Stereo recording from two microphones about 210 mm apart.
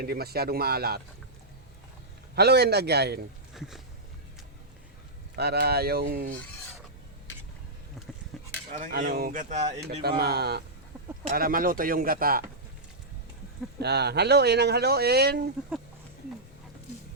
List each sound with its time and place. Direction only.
0.0 s speech: 45° right (ahead or behind)
2.3 s speech: 50° right (ahead or behind)
3.5 s speech: centre (ahead or behind)
5.4 s speech: 50° right (ahead or behind)
8.3 s a sound: centre (ahead or behind)
8.7 s speech: 40° right (ahead or behind)
10.0 s speech: 50° right (ahead or behind)
13.7 s speech: 50° right (ahead or behind)